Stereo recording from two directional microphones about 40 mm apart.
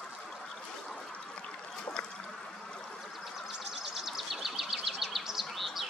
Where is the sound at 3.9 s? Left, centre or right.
Centre.